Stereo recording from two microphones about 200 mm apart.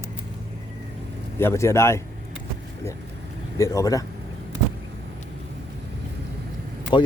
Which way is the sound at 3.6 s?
15° left (ahead or behind).